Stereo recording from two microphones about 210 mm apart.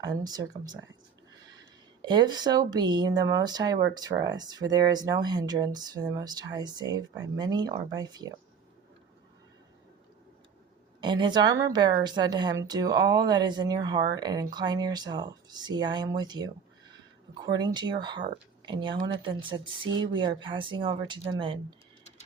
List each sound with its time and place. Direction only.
0.0 s speech: 15° right (ahead or behind)
2.0 s a woman's voice: 20° right (ahead or behind)
11.0 s a woman's voice: 20° right (ahead or behind)